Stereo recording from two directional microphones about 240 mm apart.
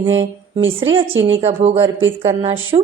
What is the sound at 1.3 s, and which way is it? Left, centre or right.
Speech, right.